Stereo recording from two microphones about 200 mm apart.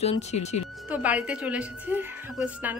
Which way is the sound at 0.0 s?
30° left (ahead or behind).